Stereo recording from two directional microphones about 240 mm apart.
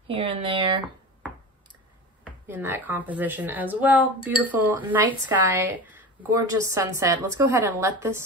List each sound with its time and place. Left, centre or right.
0.1 s speech: right
2.4 s speech: centre